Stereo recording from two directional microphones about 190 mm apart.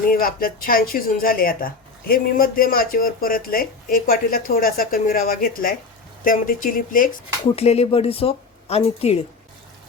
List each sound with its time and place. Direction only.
0.1 s speech: 50° left (ahead or behind)
7.4 s speech: 35° left (ahead or behind)